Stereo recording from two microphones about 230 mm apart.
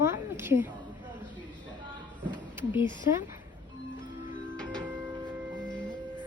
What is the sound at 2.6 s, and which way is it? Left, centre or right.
Speech, centre.